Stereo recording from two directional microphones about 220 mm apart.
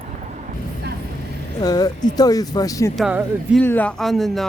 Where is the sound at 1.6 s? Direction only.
15° left (ahead or behind).